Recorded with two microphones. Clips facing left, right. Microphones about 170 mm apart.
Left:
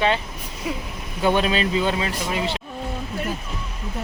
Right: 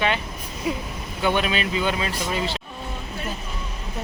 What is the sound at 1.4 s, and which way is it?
Speech, 35° left (ahead or behind).